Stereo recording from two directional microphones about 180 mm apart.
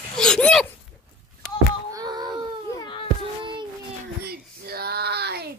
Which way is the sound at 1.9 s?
25° right (ahead or behind).